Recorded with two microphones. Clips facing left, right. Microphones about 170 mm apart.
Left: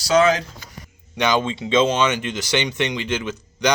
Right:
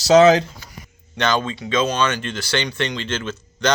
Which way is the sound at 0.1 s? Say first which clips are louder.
Right 5 dB; 35° right (ahead or behind).